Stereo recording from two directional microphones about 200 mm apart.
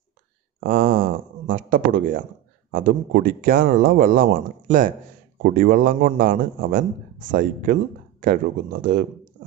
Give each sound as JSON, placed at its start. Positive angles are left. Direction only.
{"t": 0.7, "sound": "a man's voice", "side_deg": -45}